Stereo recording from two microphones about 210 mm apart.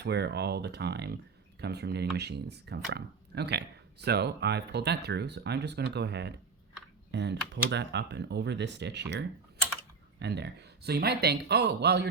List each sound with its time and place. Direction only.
0.0 s speech: 50° right (ahead or behind)